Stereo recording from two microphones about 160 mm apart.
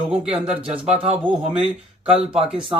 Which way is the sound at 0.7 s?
40° right (ahead or behind).